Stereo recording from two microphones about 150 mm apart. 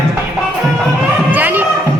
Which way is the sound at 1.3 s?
10° right (ahead or behind).